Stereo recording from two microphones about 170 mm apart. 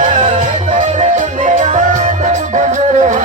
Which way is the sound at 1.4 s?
45° right (ahead or behind).